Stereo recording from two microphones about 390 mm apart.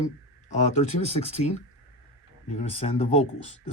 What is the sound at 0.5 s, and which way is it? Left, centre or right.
Speech, centre.